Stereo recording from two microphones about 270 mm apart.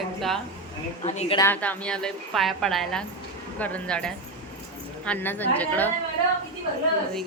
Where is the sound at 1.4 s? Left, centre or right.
Centre.